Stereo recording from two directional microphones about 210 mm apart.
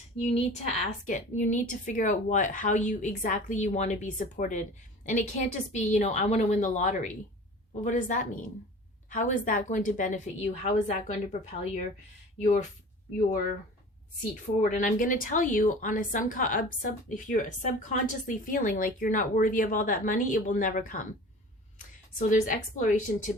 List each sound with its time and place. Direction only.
0.2 s a woman's voice: 35° left (ahead or behind)
14.6 s a woman's voice: 40° left (ahead or behind)
22.3 s a woman's voice: 35° left (ahead or behind)